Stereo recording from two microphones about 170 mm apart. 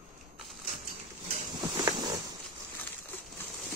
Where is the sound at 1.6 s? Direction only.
25° right (ahead or behind).